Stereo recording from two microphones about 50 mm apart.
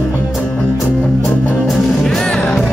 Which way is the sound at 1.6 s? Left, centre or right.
Centre.